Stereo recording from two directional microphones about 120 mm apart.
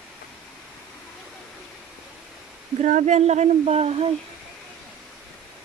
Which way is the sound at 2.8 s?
90° right.